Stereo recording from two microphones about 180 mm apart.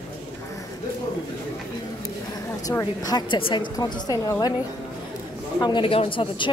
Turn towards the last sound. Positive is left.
turn(degrees=30)  # may be behind; listen again after turning